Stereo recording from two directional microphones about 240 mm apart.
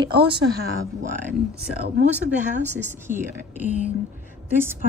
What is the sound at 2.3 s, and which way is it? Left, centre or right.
Speech, right.